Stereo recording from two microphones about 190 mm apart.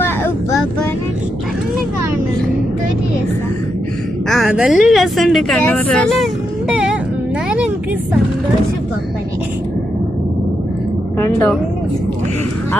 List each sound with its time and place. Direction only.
0.0 s vehicle: 10° left (ahead or behind)
4.3 s a woman's voice: centre (ahead or behind)
11.2 s speech: 10° left (ahead or behind)